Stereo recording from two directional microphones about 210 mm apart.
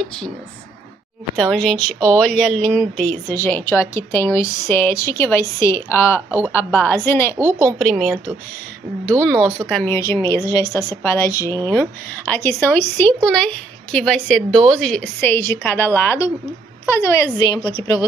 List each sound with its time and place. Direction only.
1.3 s speech: 5° left (ahead or behind)
7.8 s a woman's voice: centre (ahead or behind)
9.2 s a woman's voice: 5° left (ahead or behind); by 18.0 s 20° left (ahead or behind)